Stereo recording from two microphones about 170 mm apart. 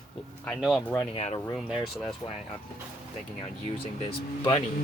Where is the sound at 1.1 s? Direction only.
40° left (ahead or behind).